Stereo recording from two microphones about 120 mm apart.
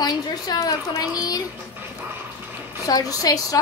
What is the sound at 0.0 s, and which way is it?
A woman's voice, 35° left (ahead or behind).